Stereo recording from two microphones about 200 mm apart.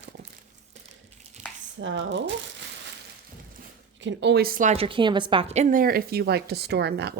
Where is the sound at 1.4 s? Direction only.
35° right (ahead or behind).